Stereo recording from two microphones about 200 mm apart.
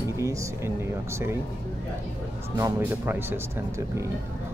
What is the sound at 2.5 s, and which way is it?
Speech, 15° right (ahead or behind).